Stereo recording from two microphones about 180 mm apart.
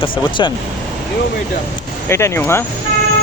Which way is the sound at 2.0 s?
15° left (ahead or behind).